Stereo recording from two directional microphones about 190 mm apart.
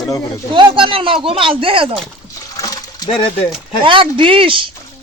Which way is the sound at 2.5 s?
20° left (ahead or behind).